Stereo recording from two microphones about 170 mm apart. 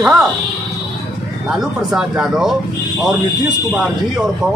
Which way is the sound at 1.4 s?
5° right (ahead or behind).